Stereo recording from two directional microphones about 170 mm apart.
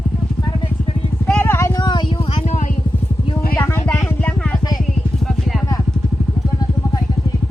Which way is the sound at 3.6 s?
10° left (ahead or behind).